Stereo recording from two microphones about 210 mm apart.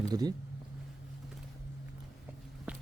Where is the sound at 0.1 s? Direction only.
20° right (ahead or behind).